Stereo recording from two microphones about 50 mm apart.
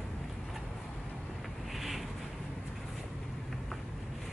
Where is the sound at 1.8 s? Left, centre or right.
Centre.